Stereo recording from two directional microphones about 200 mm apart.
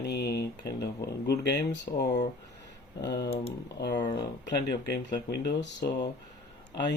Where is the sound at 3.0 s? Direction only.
20° left (ahead or behind).